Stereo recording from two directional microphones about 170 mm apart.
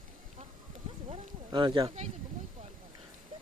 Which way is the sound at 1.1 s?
30° right (ahead or behind).